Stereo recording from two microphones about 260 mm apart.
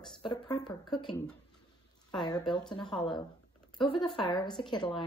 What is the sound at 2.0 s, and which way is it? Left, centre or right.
Speech, centre.